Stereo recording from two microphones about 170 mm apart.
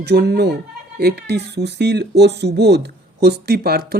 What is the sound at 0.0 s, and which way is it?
Speech, 75° right (ahead or behind).